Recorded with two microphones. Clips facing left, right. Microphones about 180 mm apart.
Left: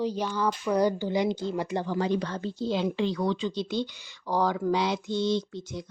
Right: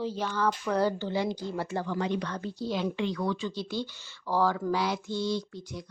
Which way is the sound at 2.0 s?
35° left (ahead or behind).